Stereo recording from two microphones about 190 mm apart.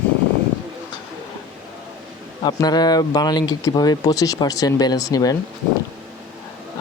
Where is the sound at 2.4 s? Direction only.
20° left (ahead or behind).